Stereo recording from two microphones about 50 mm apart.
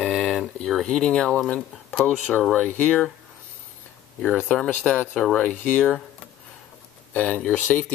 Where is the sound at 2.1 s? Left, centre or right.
Left.